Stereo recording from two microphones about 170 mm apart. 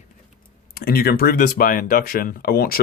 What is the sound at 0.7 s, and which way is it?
Speech, 65° left (ahead or behind).